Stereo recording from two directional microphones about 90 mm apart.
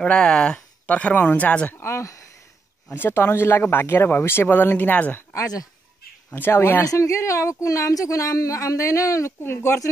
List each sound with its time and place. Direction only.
0.0 s speech: 10° left (ahead or behind)
1.8 s speech: 30° left (ahead or behind)
5.3 s speech: 40° left (ahead or behind)
6.3 s speech: 25° left (ahead or behind)